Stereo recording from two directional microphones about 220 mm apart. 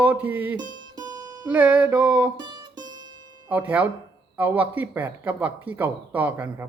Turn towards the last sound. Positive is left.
turn(degrees=-10)  # may be behind; listen again after turning